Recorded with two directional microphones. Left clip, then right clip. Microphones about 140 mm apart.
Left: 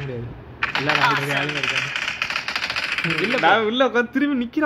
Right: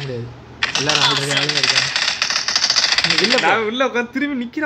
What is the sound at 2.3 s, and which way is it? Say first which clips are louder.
Machine gun: right 6 dB; 55° left (ahead or behind).